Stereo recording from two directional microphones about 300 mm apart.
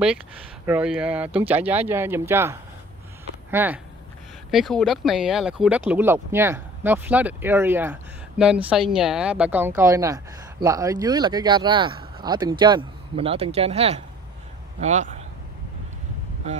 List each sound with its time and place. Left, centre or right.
0.7 s speech: centre
3.5 s a man's voice: centre; by 15.2 s right